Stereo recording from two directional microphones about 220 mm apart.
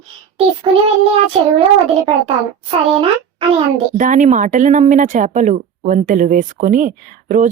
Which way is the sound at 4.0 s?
35° right (ahead or behind).